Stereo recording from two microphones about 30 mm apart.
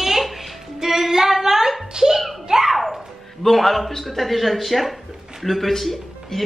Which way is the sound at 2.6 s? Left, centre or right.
Centre.